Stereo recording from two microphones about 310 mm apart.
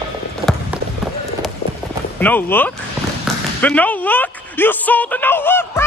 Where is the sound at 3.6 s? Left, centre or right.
Centre.